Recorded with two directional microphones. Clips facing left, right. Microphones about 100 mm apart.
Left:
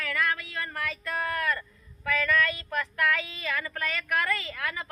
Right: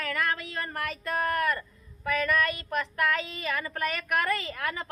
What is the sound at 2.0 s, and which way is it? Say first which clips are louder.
Speech: even; 20° right (ahead or behind).